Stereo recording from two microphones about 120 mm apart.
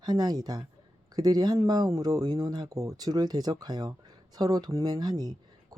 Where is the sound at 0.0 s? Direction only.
35° right (ahead or behind).